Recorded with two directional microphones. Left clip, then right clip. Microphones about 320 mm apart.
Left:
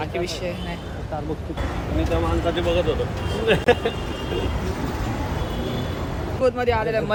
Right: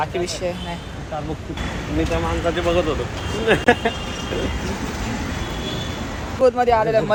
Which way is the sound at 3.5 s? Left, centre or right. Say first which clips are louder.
Right 2 dB; centre.